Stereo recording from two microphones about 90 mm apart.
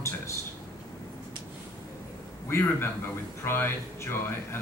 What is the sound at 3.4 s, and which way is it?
A man's voice, 25° left (ahead or behind).